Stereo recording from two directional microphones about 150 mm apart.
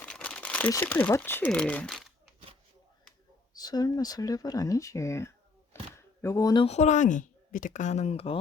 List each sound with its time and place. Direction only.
0.0 s crumpling: 10° left (ahead or behind)
0.7 s speech: 15° left (ahead or behind)
3.5 s speech: 25° left (ahead or behind)
5.7 s a sound: 15° left (ahead or behind)
6.2 s speech: 20° left (ahead or behind)
6.7 s speech: 50° left (ahead or behind)